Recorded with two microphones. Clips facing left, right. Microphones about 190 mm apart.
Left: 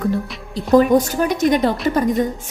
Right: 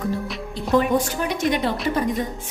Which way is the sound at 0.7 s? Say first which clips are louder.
Left 6 dB; 40° left (ahead or behind).